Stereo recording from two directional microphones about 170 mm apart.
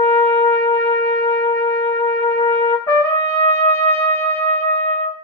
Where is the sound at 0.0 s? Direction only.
15° left (ahead or behind).